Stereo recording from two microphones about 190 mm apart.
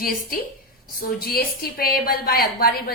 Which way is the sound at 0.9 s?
50° left (ahead or behind).